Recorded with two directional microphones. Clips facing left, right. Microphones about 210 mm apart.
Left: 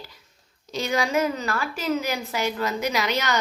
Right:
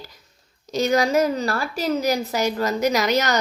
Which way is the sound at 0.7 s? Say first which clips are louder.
Right 5 dB; 40° right (ahead or behind).